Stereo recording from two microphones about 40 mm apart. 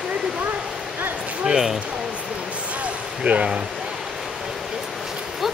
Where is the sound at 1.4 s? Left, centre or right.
Centre.